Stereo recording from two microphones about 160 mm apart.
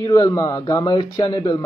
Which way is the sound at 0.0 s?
20° left (ahead or behind).